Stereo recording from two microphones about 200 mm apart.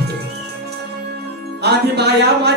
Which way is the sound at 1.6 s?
55° right (ahead or behind).